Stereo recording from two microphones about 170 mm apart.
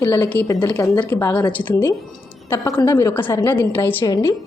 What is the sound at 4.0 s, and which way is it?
Speech, 20° left (ahead or behind).